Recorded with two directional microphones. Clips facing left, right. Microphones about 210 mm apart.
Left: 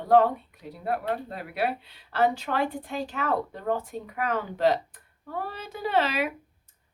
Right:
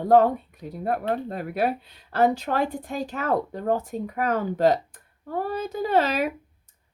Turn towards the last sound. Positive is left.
turn(degrees=-45)  # may be behind; listen again after turning